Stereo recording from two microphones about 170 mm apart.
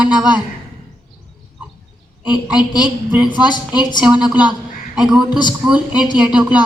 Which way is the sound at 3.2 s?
25° left (ahead or behind).